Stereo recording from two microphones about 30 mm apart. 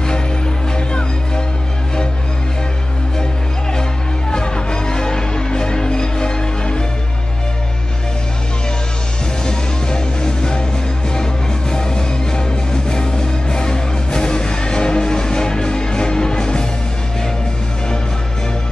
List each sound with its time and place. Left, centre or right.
0.7 s music: left
4.3 s music: left
9.4 s music: left
11.7 s music: left